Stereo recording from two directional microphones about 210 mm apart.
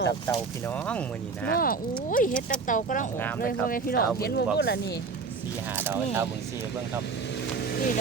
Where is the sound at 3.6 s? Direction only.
45° left (ahead or behind).